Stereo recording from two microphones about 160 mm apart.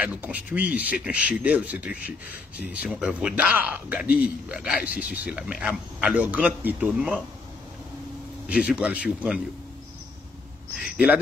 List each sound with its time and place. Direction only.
0.0 s speech: 10° right (ahead or behind)
8.5 s speech: 10° right (ahead or behind)
10.8 s speech: 5° right (ahead or behind)